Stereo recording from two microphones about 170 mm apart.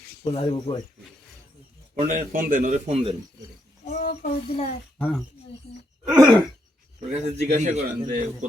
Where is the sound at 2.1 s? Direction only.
55° right (ahead or behind).